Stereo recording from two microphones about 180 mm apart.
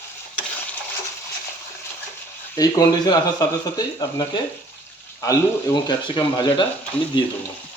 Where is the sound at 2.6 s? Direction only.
20° left (ahead or behind).